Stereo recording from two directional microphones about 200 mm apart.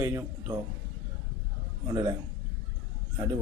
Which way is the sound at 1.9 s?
20° right (ahead or behind).